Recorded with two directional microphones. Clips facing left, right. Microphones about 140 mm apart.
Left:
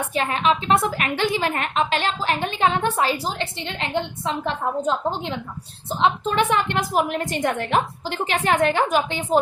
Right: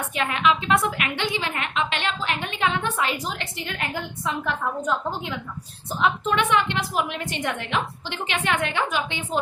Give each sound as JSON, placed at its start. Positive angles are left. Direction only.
{"t": 0.0, "sound": "a woman's voice", "side_deg": 35}